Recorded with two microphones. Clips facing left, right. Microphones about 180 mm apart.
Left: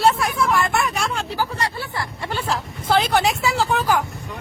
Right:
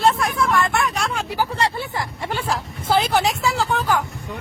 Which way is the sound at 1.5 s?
25° right (ahead or behind).